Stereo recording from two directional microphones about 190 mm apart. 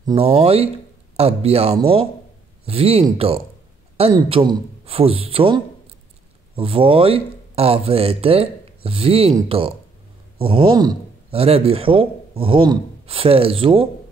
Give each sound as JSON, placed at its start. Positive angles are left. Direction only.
{"t": 0.0, "sound": "speech", "side_deg": -30}